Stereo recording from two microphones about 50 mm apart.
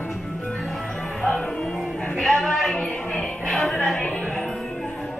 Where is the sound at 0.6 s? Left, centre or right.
Centre; by 2.2 s left.